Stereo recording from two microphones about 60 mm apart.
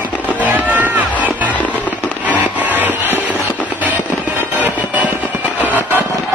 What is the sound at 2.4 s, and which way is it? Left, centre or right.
Music, right.